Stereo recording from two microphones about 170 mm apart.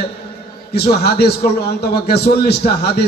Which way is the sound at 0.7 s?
70° left (ahead or behind).